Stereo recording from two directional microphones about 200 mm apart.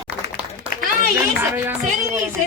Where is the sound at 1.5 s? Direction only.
10° right (ahead or behind).